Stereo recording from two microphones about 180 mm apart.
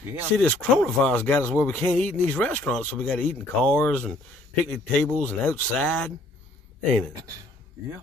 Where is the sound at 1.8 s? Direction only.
40° right (ahead or behind).